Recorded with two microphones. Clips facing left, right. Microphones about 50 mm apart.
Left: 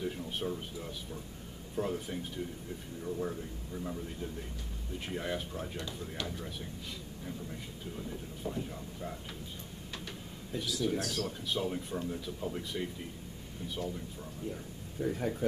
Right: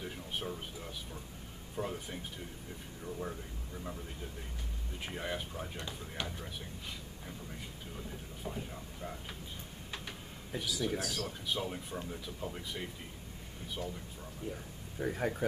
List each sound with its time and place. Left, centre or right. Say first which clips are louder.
0.0 s speech: left 4 dB; centre
5.8 s speech: left 2 dB; centre
6.2 s speech: left 3 dB; centre
8.5 s speech: left 4 dB; centre
10.8 s speech: left 4 dB; centre
14.4 s speech: left 1 dB; right